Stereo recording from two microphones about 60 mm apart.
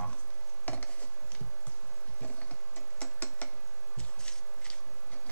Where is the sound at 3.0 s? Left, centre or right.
Left.